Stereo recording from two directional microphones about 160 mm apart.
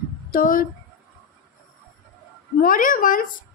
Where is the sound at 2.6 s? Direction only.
60° left (ahead or behind).